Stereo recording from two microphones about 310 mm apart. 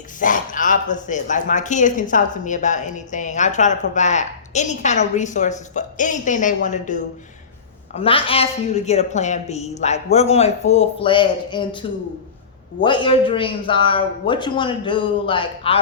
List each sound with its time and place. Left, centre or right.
0.2 s speech: left